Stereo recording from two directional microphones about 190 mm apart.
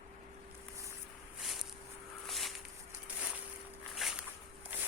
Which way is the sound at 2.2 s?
Centre (ahead or behind).